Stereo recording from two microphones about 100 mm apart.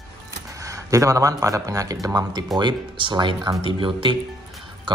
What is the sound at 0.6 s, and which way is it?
Speech, 35° right (ahead or behind).